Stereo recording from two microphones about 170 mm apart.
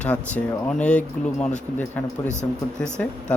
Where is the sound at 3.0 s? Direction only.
5° left (ahead or behind).